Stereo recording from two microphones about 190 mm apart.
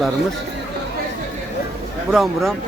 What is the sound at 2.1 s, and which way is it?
Speech, centre (ahead or behind).